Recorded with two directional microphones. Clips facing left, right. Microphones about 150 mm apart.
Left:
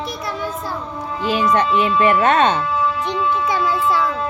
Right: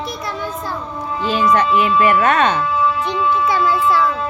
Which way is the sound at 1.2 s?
15° left (ahead or behind).